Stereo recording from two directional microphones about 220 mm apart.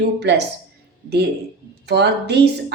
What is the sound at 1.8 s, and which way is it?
Speech, 50° right (ahead or behind).